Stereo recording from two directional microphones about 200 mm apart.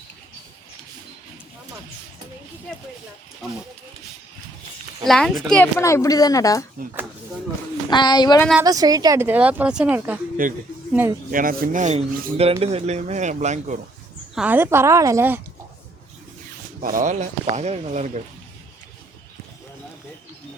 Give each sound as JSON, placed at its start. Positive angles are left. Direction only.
{"t": 5.0, "sound": "speech", "side_deg": 0}
{"t": 5.8, "sound": "a woman's voice", "side_deg": 15}
{"t": 7.9, "sound": "a woman's voice", "side_deg": 20}
{"t": 8.6, "sound": "speech", "side_deg": -20}
{"t": 10.4, "sound": "speech", "side_deg": -45}
{"t": 14.3, "sound": "speech", "side_deg": -10}
{"t": 16.8, "sound": "speech", "side_deg": -40}